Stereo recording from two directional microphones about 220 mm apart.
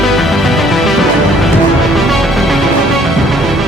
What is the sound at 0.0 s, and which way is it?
Music, centre (ahead or behind).